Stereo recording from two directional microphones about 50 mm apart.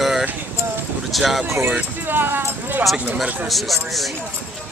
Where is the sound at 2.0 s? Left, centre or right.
Right.